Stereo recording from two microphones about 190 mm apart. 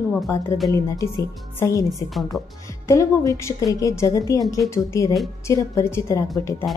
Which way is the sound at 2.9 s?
15° left (ahead or behind).